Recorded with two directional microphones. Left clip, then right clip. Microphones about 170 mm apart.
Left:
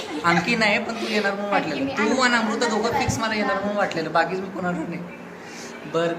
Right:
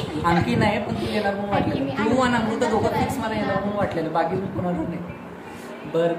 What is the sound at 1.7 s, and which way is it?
Speech, 15° left (ahead or behind).